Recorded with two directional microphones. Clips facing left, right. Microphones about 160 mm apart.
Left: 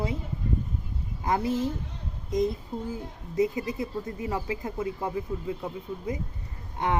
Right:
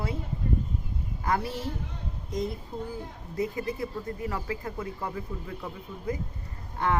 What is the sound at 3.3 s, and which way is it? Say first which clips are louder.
Speech: left 4 dB; 20° left (ahead or behind).